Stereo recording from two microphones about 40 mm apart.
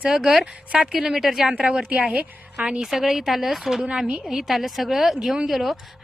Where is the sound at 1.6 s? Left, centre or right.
Right.